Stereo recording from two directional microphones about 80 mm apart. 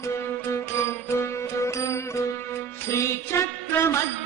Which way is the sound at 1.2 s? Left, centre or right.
Left.